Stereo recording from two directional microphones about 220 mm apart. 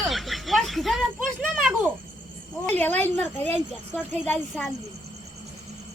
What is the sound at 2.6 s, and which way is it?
Speech, 10° left (ahead or behind).